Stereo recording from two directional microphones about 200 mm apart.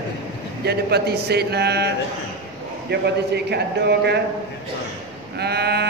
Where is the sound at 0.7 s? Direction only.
55° right (ahead or behind).